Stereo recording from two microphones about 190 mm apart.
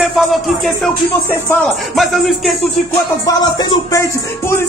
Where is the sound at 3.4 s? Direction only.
20° left (ahead or behind).